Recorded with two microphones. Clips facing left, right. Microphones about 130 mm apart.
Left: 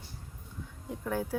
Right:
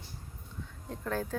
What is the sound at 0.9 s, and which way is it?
Speech, 10° left (ahead or behind).